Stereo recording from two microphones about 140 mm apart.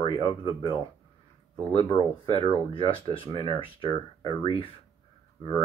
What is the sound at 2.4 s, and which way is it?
Speech, 40° left (ahead or behind).